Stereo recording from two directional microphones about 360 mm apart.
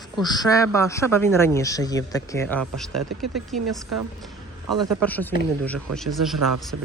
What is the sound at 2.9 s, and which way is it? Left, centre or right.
Speech, right.